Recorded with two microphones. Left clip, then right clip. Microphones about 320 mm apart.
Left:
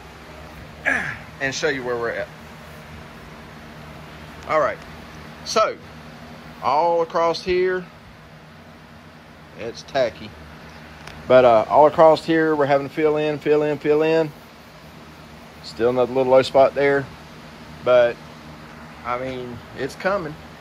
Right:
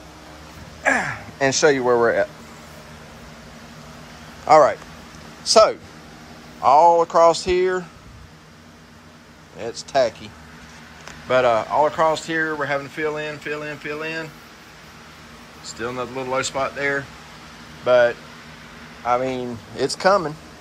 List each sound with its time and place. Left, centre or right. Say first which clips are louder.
1.4 s speech: right 6 dB; right
5.5 s speech: right 6 dB; centre
9.7 s speech: right 2 dB; centre
11.2 s speech: left 4 dB; centre
15.8 s speech: left 9 dB; centre